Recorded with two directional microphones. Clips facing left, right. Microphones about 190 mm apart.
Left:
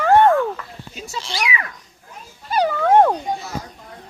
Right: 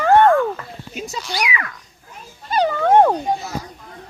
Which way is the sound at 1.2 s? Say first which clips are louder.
Even; 25° left (ahead or behind).